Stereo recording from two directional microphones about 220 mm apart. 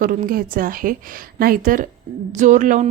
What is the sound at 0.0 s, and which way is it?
Speech, 40° right (ahead or behind).